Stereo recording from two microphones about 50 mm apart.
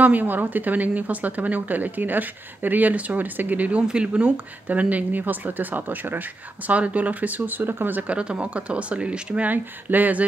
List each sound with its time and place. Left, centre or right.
0.0 s a woman's voice: right
3.8 s a woman's voice: right
8.1 s speech: right
9.5 s a woman's voice: right